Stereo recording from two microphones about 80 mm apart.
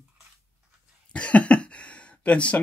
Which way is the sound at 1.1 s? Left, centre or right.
Centre.